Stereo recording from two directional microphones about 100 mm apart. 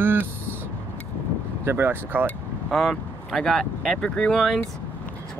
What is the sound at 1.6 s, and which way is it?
Speech, 25° right (ahead or behind).